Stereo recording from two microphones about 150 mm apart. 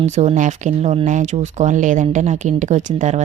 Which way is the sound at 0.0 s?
50° right (ahead or behind).